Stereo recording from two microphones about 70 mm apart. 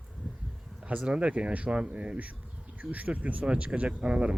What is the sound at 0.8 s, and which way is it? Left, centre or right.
Speech, centre.